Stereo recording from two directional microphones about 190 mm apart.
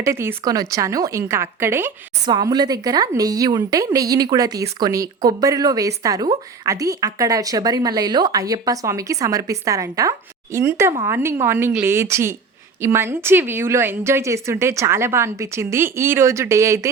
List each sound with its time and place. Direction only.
0.0 s a woman's voice: 15° right (ahead or behind)